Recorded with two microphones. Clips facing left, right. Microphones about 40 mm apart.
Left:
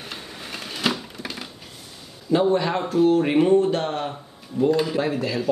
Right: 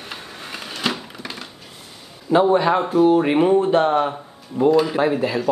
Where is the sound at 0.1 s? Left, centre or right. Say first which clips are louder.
Right 3 dB; centre.